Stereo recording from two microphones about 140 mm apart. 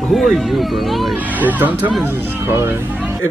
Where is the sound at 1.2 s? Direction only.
10° right (ahead or behind).